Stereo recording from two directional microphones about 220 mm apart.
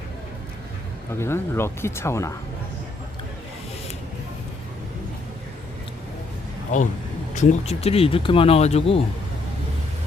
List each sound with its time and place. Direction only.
1.2 s speech: 10° left (ahead or behind)
6.7 s speech: 35° left (ahead or behind)